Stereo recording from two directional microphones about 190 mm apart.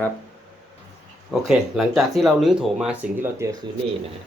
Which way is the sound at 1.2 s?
Centre (ahead or behind).